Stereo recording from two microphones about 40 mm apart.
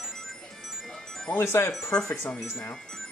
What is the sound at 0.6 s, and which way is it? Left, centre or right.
Music, centre.